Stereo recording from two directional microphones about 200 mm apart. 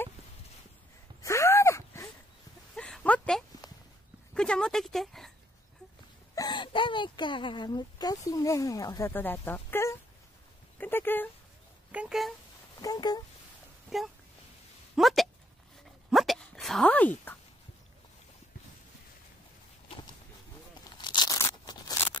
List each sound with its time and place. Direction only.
1.2 s gasp: 15° left (ahead or behind)
2.7 s a sound: 5° left (ahead or behind)
4.3 s speech: 5° left (ahead or behind)
6.3 s speech: 20° left (ahead or behind)
10.8 s a sound: 10° left (ahead or behind)
11.9 s speech: 5° right (ahead or behind)
12.8 s speech: 20° left (ahead or behind)
13.8 s speech: centre (ahead or behind)
15.0 s a sound: centre (ahead or behind)
21.0 s tearing: 20° left (ahead or behind)